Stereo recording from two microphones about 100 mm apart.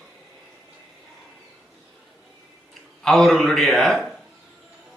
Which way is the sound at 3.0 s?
5° left (ahead or behind).